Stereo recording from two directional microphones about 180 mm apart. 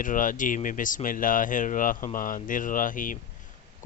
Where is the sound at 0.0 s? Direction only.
45° left (ahead or behind).